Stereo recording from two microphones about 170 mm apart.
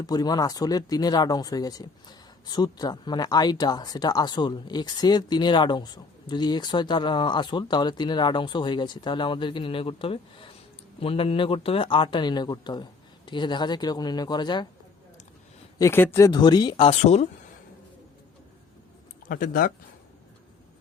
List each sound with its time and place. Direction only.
0.0 s speech: 25° left (ahead or behind)
15.8 s speech: 15° left (ahead or behind); by 17.2 s 40° left (ahead or behind)
19.3 s speech: 60° left (ahead or behind)